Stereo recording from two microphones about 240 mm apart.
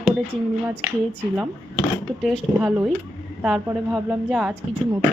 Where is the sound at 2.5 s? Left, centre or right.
Centre.